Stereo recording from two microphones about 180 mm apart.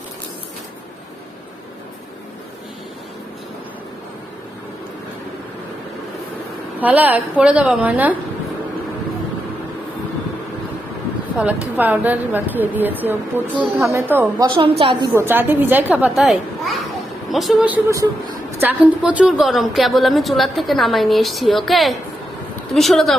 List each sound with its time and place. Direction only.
6.7 s a woman's voice: 10° right (ahead or behind)
11.3 s a woman's voice: 10° right (ahead or behind)
14.4 s a woman's voice: 30° right (ahead or behind)
15.1 s a woman's voice: 10° right (ahead or behind)